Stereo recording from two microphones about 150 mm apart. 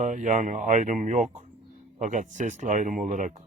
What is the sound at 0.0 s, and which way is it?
Speech, 55° right (ahead or behind).